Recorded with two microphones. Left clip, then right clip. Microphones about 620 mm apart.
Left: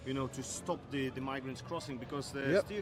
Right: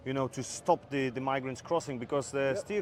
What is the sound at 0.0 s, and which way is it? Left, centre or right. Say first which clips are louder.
Speech: right 5 dB; right.